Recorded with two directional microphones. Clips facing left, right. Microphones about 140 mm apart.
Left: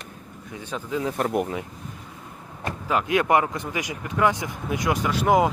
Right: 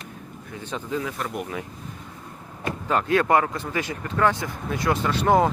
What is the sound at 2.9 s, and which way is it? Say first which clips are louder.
Speech: right 1 dB; 10° left (ahead or behind).